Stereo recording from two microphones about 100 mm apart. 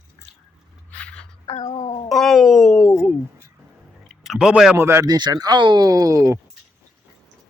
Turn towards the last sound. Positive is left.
turn(degrees=-35)  # may be behind; listen again after turning